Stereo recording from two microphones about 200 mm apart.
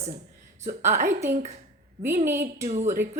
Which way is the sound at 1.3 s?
35° right (ahead or behind).